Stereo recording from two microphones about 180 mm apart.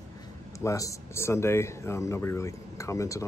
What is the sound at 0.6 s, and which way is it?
Speech, 20° left (ahead or behind).